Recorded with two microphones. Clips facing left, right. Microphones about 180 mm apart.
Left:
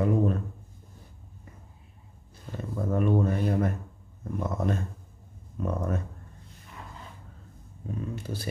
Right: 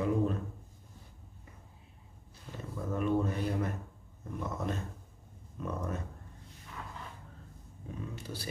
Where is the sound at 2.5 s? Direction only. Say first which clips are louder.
Left 7 dB; 50° left (ahead or behind).